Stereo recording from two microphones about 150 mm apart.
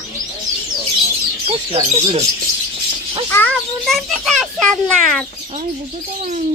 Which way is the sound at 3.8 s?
Centre (ahead or behind).